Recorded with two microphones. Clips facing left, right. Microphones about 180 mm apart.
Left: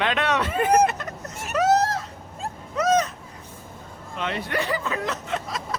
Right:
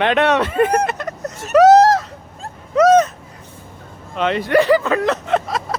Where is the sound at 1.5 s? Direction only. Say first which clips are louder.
Right 11 dB; 85° right.